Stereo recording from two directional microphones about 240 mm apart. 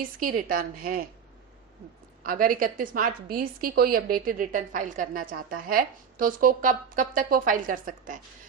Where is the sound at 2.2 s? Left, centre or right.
Right.